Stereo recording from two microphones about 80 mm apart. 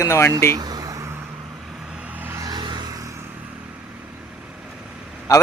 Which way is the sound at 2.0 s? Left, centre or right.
Centre.